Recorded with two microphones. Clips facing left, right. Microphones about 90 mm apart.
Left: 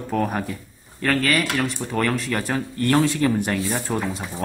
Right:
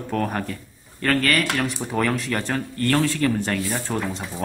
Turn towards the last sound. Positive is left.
turn(degrees=5)  # may be behind; listen again after turning